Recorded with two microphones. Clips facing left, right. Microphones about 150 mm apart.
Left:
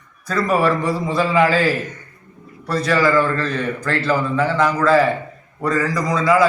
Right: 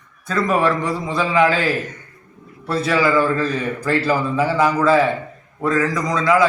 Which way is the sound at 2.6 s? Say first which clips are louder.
Left 1 dB; 5° right (ahead or behind).